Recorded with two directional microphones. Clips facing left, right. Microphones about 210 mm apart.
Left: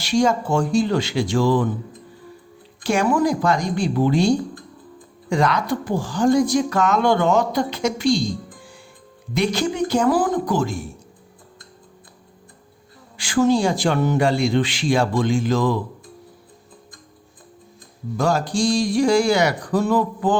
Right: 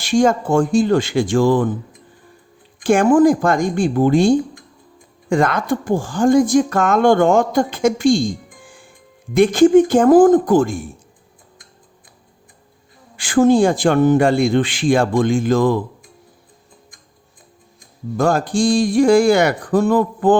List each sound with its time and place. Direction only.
0.0 s speech: 50° right (ahead or behind)
2.8 s speech: 50° right (ahead or behind)
4.4 s typing: 15° right (ahead or behind)
5.3 s speech: 50° right (ahead or behind)
13.1 s speech: 50° right (ahead or behind)
18.2 s speech: 55° right (ahead or behind)